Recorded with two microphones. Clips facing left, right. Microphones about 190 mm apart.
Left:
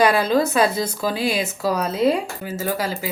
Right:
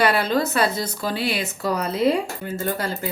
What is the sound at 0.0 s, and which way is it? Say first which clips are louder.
A woman's voice: left 3 dB; 10° left (ahead or behind).